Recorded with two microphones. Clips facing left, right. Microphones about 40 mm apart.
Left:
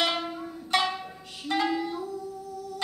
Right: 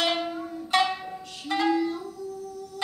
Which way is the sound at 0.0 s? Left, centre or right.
Centre.